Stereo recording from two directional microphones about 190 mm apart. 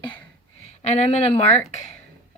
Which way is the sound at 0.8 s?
35° left (ahead or behind).